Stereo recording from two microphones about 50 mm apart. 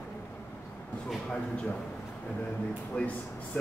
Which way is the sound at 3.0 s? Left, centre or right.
Left.